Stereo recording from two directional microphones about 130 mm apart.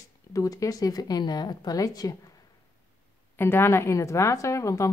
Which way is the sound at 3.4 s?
15° left (ahead or behind).